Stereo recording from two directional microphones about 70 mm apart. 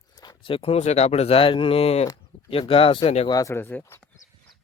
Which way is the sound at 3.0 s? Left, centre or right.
Left.